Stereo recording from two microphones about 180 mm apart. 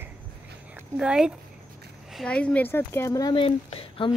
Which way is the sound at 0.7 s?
5° right (ahead or behind).